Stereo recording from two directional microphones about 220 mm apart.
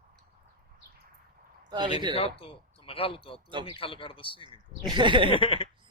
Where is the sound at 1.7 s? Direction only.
20° right (ahead or behind).